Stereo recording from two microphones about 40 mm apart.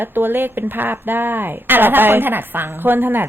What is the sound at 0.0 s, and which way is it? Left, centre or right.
A woman's voice, right.